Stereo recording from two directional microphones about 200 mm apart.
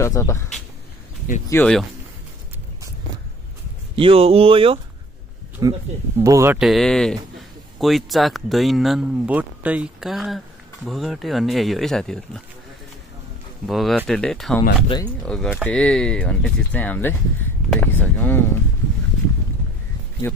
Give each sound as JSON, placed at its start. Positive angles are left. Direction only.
{"t": 0.0, "sound": "speech", "side_deg": 15}
{"t": 1.5, "sound": "speech", "side_deg": 5}
{"t": 3.9, "sound": "speech", "side_deg": -25}
{"t": 5.6, "sound": "speech", "side_deg": -15}
{"t": 6.6, "sound": "speech", "side_deg": 0}
{"t": 13.7, "sound": "speech", "side_deg": 0}
{"t": 20.2, "sound": "speech", "side_deg": 10}